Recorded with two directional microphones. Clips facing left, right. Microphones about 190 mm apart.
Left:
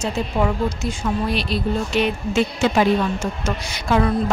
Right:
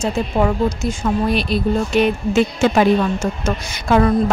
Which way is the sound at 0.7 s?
50° right (ahead or behind).